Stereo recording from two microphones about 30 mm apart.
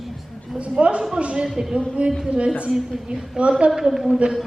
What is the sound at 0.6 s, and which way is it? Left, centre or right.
Speech, right.